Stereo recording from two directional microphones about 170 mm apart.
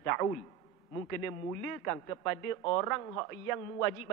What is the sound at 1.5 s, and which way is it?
A man's voice, 20° left (ahead or behind).